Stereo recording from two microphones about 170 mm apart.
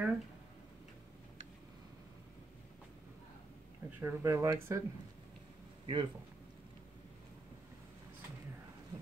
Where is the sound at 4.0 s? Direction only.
15° right (ahead or behind).